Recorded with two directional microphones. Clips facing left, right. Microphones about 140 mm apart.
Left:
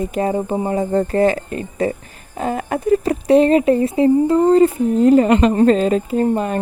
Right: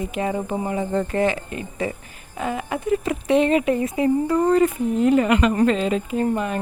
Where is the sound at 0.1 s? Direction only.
35° left (ahead or behind).